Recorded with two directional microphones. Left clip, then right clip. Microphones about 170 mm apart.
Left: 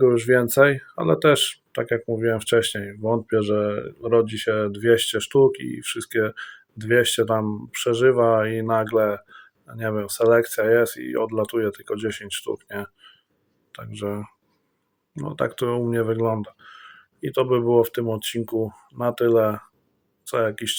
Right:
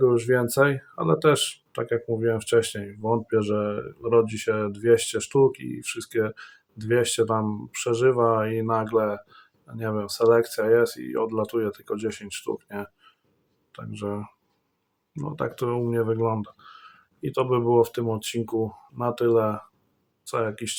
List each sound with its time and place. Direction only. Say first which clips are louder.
0.0 s speech: left 3 dB; 20° left (ahead or behind)